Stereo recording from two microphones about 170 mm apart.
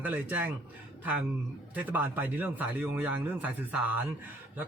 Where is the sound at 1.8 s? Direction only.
10° right (ahead or behind).